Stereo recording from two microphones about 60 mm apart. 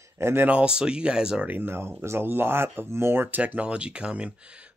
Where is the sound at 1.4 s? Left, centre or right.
Right.